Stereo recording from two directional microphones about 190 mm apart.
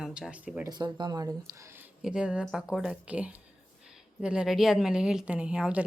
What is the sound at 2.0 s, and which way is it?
A woman's voice, 5° right (ahead or behind).